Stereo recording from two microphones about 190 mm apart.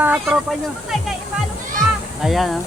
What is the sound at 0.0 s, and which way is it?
Speech, 5° right (ahead or behind).